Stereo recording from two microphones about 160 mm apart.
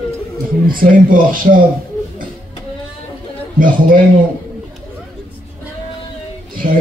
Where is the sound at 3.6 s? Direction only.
60° right (ahead or behind).